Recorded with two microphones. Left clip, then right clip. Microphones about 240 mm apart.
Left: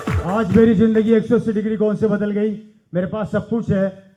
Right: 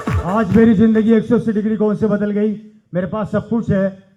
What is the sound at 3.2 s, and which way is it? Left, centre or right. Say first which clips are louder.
Speech: right 2 dB; right.